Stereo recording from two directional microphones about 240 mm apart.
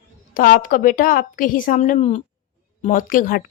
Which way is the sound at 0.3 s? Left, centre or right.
Left.